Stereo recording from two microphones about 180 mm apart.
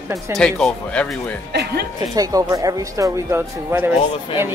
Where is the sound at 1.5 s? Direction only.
65° right (ahead or behind).